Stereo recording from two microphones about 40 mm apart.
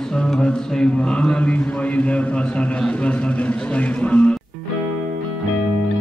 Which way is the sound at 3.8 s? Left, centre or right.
Left.